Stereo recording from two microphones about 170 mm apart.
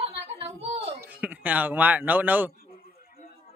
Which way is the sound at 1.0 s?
10° right (ahead or behind).